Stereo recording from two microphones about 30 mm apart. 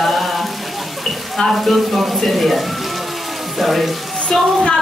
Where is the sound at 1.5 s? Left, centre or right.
Centre.